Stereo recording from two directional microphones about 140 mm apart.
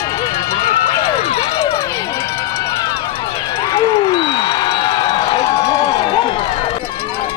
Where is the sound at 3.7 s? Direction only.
35° left (ahead or behind).